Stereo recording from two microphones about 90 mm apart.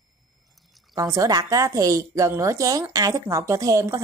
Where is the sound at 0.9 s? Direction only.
35° right (ahead or behind).